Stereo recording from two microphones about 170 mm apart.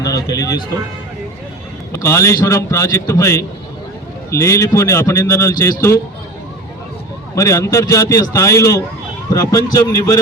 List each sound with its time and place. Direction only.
0.0 s music: 20° left (ahead or behind)
1.9 s a man's voice: 15° left (ahead or behind)
7.3 s a man's voice: 20° left (ahead or behind)